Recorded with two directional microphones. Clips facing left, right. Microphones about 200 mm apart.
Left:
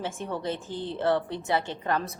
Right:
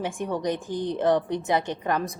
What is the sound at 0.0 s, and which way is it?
A woman's voice, 15° right (ahead or behind).